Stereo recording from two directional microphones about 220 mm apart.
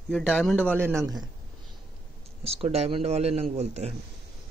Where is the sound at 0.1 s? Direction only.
Centre (ahead or behind).